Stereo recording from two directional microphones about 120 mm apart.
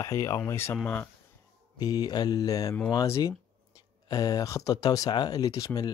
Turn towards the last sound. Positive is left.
turn(degrees=30)  # may be behind; listen again after turning